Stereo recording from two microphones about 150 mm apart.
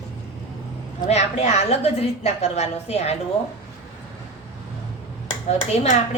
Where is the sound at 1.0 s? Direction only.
50° left (ahead or behind).